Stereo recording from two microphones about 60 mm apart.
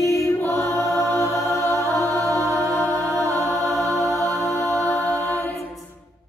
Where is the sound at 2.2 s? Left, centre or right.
Right.